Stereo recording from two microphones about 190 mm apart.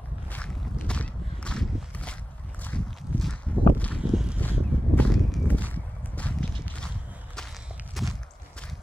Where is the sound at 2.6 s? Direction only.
5° left (ahead or behind).